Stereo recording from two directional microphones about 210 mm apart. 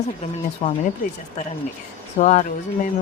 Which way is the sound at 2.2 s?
35° left (ahead or behind).